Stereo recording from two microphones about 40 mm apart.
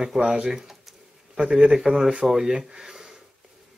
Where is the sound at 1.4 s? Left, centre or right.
Centre.